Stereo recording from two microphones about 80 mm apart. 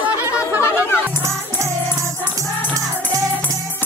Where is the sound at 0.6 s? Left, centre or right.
Left.